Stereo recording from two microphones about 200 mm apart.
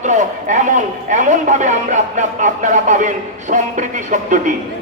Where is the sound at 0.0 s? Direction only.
35° right (ahead or behind).